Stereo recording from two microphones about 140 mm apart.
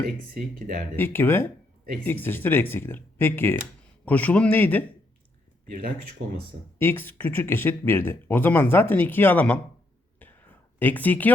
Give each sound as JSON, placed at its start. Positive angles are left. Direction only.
{"t": 0.9, "sound": "speech", "side_deg": 15}
{"t": 5.6, "sound": "speech", "side_deg": -80}
{"t": 6.7, "sound": "speech", "side_deg": 15}
{"t": 10.8, "sound": "speech", "side_deg": 15}